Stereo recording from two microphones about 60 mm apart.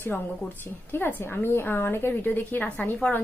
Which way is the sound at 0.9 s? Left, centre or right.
Left.